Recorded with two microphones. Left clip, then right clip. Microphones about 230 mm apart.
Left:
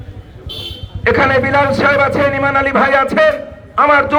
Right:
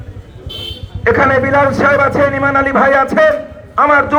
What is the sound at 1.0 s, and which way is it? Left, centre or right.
A man's voice, left.